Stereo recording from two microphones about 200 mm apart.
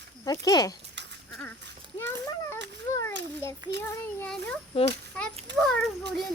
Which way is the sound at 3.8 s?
5° left (ahead or behind).